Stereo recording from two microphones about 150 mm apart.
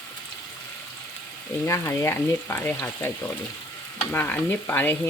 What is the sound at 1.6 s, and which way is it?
Speech, 20° left (ahead or behind).